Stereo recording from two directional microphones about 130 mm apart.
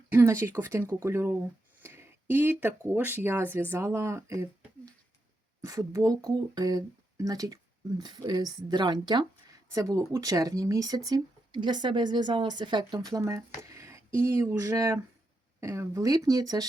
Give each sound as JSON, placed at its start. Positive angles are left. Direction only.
{"t": 0.1, "sound": "speech", "side_deg": -20}
{"t": 5.6, "sound": "speech", "side_deg": -25}
{"t": 13.6, "sound": "a sound", "side_deg": -20}
{"t": 14.2, "sound": "speech", "side_deg": -20}